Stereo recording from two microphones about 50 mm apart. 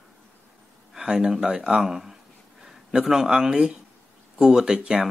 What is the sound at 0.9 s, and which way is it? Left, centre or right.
Speech, centre.